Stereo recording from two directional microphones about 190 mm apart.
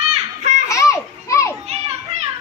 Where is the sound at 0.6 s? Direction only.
15° left (ahead or behind).